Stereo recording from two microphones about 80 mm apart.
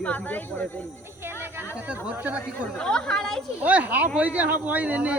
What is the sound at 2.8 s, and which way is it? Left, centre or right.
Fowl, centre.